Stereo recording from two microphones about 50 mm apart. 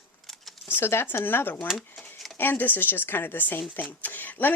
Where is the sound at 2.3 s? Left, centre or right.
Left.